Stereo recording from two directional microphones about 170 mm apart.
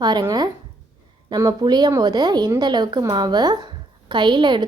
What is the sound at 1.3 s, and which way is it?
A woman's voice, 25° right (ahead or behind).